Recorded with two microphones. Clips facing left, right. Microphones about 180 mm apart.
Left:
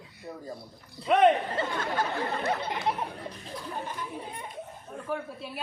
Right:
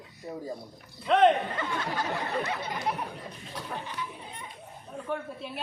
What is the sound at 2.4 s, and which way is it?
Speech, 55° left (ahead or behind).